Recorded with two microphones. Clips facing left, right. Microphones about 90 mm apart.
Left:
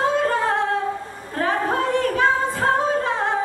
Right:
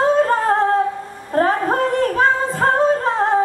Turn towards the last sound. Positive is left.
turn(degrees=-40)  # may be behind; listen again after turning